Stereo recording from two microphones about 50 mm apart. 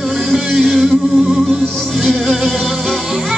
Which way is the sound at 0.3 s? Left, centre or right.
Centre.